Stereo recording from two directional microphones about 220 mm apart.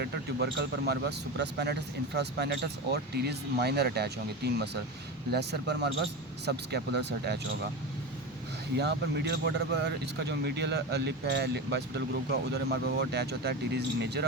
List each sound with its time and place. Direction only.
0.0 s speech: 50° right (ahead or behind)
8.8 s speech: 50° right (ahead or behind)